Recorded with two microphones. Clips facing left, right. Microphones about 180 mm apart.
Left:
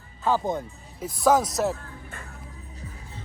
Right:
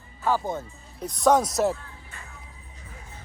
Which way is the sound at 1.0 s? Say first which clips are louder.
Even; 5° left (ahead or behind).